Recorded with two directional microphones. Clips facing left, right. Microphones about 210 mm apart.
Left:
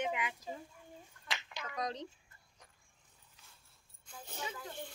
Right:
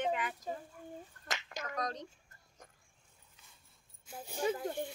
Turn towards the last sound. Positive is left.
turn(degrees=-50)  # may be behind; listen again after turning